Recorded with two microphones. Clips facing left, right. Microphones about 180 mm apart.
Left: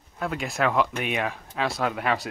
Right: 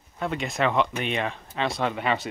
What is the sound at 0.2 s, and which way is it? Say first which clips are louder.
Speech: even; centre (ahead or behind).